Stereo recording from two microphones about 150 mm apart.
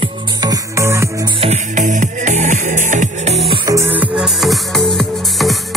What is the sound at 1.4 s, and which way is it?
Music, 50° right (ahead or behind).